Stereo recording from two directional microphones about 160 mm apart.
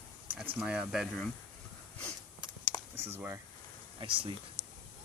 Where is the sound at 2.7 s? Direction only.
Centre (ahead or behind).